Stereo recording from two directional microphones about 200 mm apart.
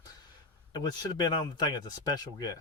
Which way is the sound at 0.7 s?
20° left (ahead or behind).